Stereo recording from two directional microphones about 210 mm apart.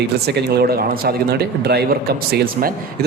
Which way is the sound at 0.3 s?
50° right (ahead or behind).